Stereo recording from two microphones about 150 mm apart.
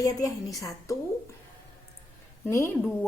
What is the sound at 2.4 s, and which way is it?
Speech, 20° left (ahead or behind).